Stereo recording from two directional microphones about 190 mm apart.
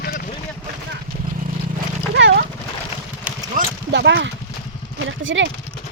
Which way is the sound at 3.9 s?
65° right (ahead or behind).